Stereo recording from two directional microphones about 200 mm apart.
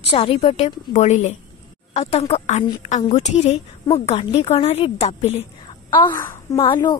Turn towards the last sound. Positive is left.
turn(degrees=20)  # may be behind; listen again after turning